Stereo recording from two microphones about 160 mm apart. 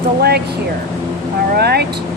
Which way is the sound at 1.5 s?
90° right.